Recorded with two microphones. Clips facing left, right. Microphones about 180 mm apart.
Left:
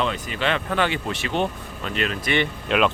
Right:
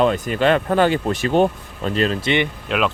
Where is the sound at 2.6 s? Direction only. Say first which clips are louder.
Even; centre (ahead or behind).